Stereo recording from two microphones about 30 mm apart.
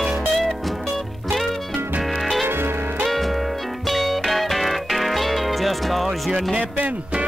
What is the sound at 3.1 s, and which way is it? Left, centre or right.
Music, centre.